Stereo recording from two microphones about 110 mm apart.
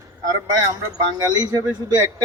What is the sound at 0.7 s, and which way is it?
Speech, 35° right (ahead or behind).